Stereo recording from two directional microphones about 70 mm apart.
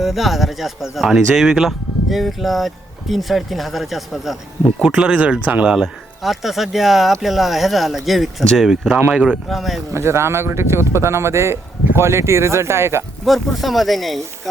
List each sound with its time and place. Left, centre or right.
0.0 s speech: centre
4.9 s speech: centre
9.5 s speech: centre
9.9 s speech: right
13.2 s speech: centre